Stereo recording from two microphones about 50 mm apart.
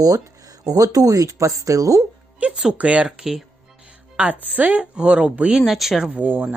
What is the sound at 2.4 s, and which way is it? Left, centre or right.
Speech, right.